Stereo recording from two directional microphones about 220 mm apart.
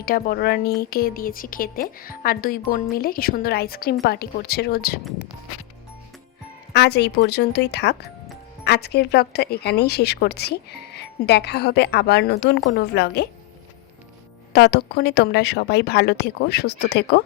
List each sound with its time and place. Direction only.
0.0 s a woman's voice: 40° left (ahead or behind)
6.7 s speech: 50° left (ahead or behind)
14.5 s speech: 50° left (ahead or behind)